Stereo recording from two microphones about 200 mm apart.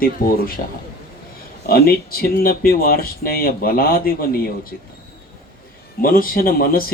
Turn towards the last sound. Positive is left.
turn(degrees=45)  # may be behind; listen again after turning